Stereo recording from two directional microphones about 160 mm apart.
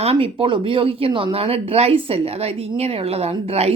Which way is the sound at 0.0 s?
40° right (ahead or behind).